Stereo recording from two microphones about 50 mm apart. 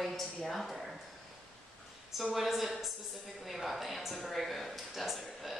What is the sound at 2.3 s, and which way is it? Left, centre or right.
Speech, centre.